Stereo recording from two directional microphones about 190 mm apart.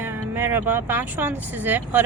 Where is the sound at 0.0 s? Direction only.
10° right (ahead or behind).